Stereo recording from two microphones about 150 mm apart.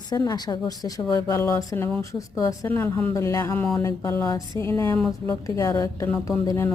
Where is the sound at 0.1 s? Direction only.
25° left (ahead or behind).